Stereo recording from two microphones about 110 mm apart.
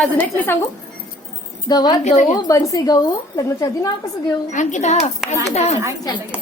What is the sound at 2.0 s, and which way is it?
Speech, 90° left.